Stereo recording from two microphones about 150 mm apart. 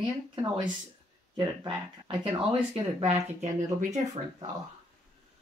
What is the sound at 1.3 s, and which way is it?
Speech, 35° right (ahead or behind).